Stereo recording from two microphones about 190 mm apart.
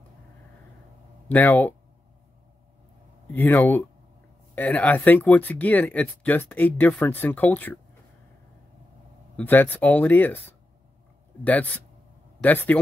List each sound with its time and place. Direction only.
1.3 s speech: 10° left (ahead or behind)
3.3 s speech: 10° left (ahead or behind)
9.4 s speech: 10° left (ahead or behind)
11.4 s speech: 10° left (ahead or behind)